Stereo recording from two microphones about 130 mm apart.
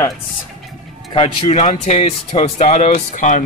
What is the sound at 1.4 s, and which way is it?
Speech, 60° left (ahead or behind).